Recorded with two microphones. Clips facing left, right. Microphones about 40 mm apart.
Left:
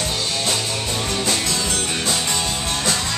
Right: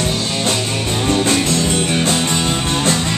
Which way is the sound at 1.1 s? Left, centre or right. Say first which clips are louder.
Right 9 dB; right.